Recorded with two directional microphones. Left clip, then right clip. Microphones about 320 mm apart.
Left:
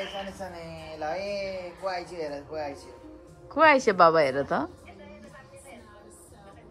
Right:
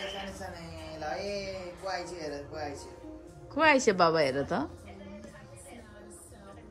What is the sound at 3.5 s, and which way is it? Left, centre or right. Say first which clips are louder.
A woman's voice: left 4 dB; centre.